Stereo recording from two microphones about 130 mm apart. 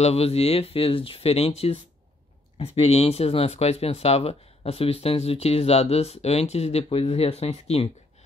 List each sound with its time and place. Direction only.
0.0 s speech: 50° left (ahead or behind)